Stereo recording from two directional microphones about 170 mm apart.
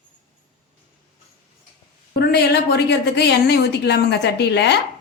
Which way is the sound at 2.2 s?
75° left (ahead or behind).